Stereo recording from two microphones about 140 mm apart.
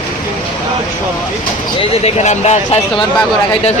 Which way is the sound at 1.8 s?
50° left (ahead or behind).